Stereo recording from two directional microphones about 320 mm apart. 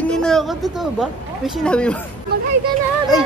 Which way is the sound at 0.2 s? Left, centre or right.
Centre.